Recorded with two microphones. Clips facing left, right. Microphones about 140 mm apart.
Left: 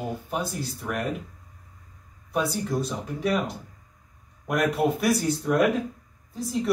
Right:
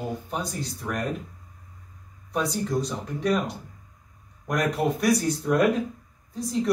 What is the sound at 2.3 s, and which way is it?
Speech, 5° left (ahead or behind).